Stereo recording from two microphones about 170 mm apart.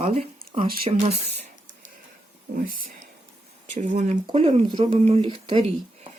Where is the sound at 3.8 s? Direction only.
45° right (ahead or behind).